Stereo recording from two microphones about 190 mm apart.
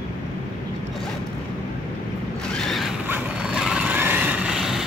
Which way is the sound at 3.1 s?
5° right (ahead or behind).